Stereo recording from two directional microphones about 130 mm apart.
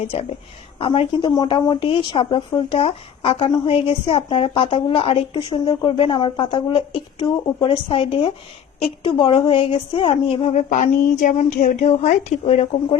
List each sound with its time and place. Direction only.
0.0 s speech: 50° left (ahead or behind)
10.5 s a woman's voice: 65° left (ahead or behind)